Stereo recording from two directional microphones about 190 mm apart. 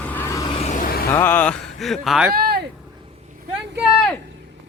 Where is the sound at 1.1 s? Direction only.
10° left (ahead or behind).